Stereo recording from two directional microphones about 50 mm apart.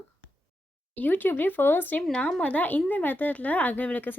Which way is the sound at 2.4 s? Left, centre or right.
Left.